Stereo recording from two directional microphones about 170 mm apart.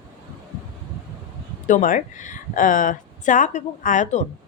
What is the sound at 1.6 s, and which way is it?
A woman's voice, 50° left (ahead or behind).